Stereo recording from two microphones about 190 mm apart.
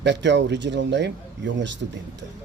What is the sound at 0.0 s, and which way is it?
Speech, 65° right (ahead or behind).